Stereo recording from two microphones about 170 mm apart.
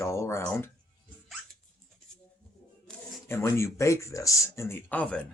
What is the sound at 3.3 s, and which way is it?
Speech, 15° left (ahead or behind).